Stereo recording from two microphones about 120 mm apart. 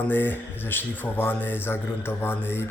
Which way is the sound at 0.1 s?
15° left (ahead or behind).